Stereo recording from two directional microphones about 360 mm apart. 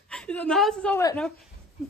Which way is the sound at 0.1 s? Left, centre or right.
Centre.